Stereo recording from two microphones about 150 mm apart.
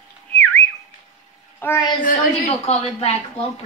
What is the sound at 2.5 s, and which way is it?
Speech, 45° left (ahead or behind).